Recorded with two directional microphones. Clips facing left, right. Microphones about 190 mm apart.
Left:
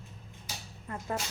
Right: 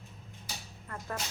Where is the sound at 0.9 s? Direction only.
20° left (ahead or behind).